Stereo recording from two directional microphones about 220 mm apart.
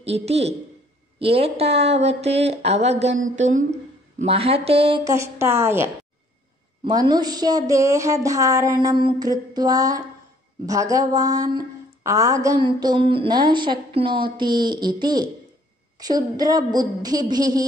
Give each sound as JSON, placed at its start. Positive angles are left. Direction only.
{"t": 0.0, "sound": "a woman's voice", "side_deg": -30}